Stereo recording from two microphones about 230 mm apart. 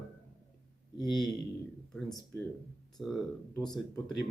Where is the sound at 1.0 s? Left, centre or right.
Centre.